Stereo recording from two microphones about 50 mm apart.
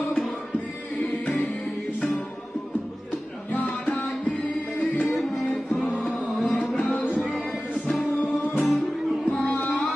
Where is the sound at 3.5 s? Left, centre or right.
Left.